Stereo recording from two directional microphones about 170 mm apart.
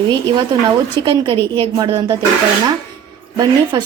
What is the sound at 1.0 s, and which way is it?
A woman's voice, 30° right (ahead or behind).